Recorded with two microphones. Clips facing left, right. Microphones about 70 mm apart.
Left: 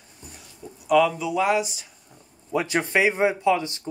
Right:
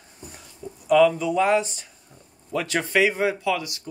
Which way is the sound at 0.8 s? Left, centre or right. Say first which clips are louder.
Right 2 dB; centre.